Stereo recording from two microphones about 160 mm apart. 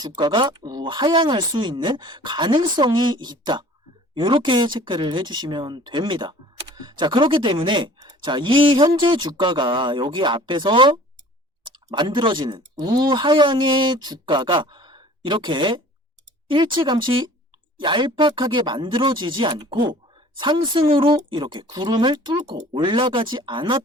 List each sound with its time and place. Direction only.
0.2 s speech: 30° right (ahead or behind)